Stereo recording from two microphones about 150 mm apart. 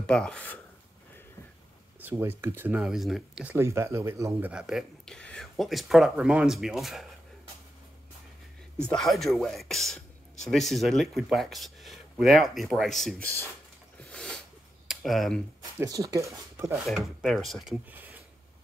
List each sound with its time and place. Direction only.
0.0 s speech: 5° left (ahead or behind)
2.0 s speech: 15° right (ahead or behind)
3.5 s speech: 20° right (ahead or behind); by 7.1 s centre (ahead or behind)
8.8 s speech: 5° left (ahead or behind)
13.9 s a sound: 5° left (ahead or behind)
14.9 s speech: centre (ahead or behind)
15.8 s speech: 20° right (ahead or behind)
16.7 s speech: centre (ahead or behind)
17.8 s speech: 10° right (ahead or behind)